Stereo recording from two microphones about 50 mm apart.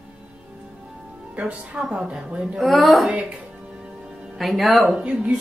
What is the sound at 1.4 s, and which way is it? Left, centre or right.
A woman's voice, right.